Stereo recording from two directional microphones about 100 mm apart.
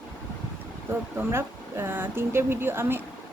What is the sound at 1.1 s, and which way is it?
Speech, 25° right (ahead or behind).